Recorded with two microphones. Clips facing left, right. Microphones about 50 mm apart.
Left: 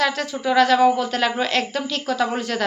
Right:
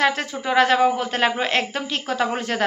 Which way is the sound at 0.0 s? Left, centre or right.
Right.